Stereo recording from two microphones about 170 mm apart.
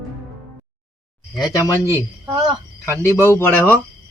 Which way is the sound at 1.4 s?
25° left (ahead or behind).